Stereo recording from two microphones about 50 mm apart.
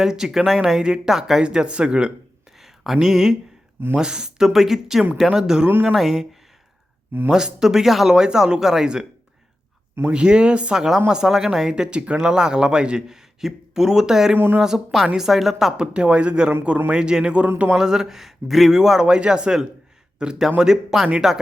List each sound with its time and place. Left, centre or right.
0.0 s speech: centre
1.4 s speech: centre
7.3 s speech: centre
10.1 s speech: centre
10.8 s speech: centre
14.3 s speech: right
14.6 s a woman's voice: centre
15.8 s speech: right